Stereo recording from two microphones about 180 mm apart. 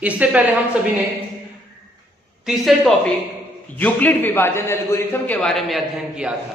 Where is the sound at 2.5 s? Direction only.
Centre (ahead or behind).